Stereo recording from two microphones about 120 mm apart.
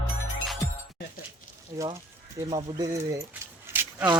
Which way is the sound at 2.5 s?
35° right (ahead or behind).